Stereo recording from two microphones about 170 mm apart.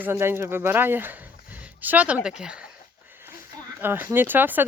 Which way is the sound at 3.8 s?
10° right (ahead or behind).